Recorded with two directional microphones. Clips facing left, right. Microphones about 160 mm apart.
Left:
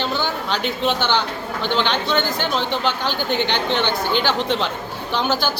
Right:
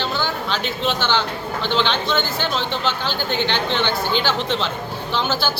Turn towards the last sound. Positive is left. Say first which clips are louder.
# left 1 dB
turn(degrees=15)  # may be behind; listen again after turning